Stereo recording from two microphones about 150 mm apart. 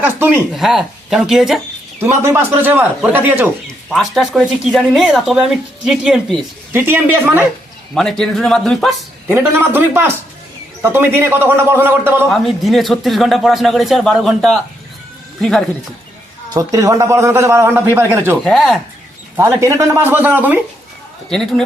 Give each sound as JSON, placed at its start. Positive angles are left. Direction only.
{"t": 0.0, "sound": "a man's voice", "side_deg": -10}
{"t": 0.5, "sound": "speech", "side_deg": 0}
{"t": 2.0, "sound": "a man's voice", "side_deg": -15}
{"t": 3.7, "sound": "speech", "side_deg": 0}
{"t": 6.7, "sound": "a man's voice", "side_deg": -15}
{"t": 7.9, "sound": "speech", "side_deg": 5}
{"t": 9.3, "sound": "a man's voice", "side_deg": -15}
{"t": 12.3, "sound": "speech", "side_deg": 0}
{"t": 16.6, "sound": "a man's voice", "side_deg": -20}
{"t": 18.4, "sound": "speech", "side_deg": 0}
{"t": 19.4, "sound": "a man's voice", "side_deg": -20}
{"t": 21.2, "sound": "speech", "side_deg": 0}